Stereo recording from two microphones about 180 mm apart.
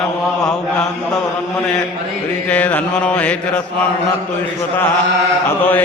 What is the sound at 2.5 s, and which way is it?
Mantra, 5° left (ahead or behind).